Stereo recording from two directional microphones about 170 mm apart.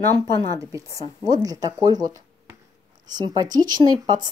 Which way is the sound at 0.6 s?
20° right (ahead or behind).